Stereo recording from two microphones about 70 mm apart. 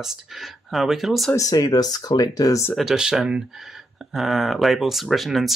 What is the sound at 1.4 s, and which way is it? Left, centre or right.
Speech, left.